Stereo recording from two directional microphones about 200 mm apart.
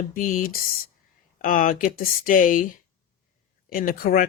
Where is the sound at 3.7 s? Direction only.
45° left (ahead or behind).